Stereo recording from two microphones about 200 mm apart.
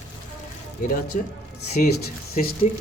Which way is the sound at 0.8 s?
45° left (ahead or behind).